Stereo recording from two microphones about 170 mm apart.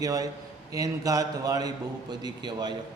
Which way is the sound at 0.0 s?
20° right (ahead or behind).